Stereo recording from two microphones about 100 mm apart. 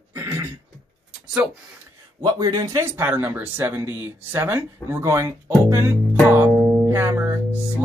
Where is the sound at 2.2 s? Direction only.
35° right (ahead or behind).